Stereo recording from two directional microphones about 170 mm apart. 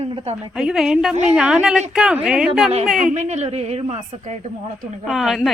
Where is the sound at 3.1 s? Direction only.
40° right (ahead or behind).